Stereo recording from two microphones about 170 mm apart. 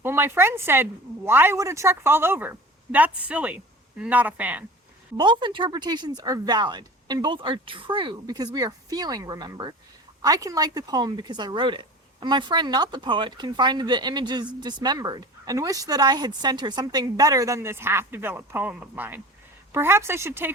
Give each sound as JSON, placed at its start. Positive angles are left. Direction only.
{"t": 0.0, "sound": "speech", "side_deg": -15}
{"t": 5.1, "sound": "speech", "side_deg": -25}